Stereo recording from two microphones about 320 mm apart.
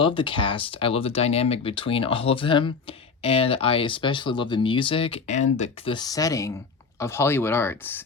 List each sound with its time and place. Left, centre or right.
0.0 s speech: centre